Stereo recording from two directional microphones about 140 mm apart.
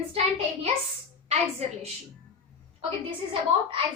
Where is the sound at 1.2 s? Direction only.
50° right (ahead or behind).